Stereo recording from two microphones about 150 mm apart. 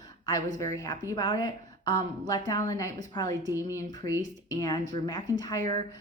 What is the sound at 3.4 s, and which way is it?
Speech, 15° right (ahead or behind).